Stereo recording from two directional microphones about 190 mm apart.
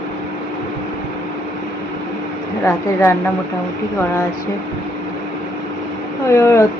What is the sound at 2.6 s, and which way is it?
Speech, 15° left (ahead or behind).